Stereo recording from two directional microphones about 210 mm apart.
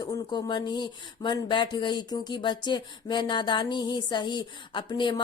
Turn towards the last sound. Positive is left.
turn(degrees=20)  # may be behind; listen again after turning